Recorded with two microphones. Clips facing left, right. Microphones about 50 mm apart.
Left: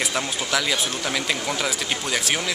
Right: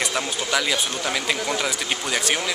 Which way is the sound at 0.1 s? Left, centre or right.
Centre.